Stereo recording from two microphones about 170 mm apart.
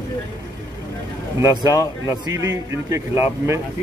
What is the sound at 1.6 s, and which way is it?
Speech, 20° left (ahead or behind).